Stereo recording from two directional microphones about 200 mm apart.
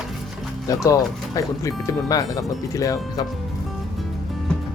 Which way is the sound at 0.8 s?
15° left (ahead or behind).